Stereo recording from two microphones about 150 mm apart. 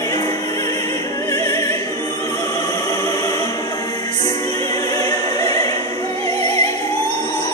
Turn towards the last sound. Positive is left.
turn(degrees=25)  # may be behind; listen again after turning